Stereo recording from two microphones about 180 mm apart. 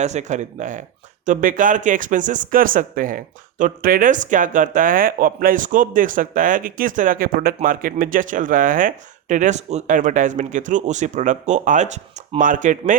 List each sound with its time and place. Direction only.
0.0 s speech: 40° right (ahead or behind)